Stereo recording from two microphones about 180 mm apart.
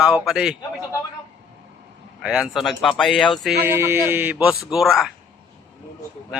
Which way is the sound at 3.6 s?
15° right (ahead or behind).